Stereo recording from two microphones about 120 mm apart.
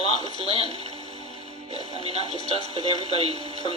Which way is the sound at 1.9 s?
60° right (ahead or behind).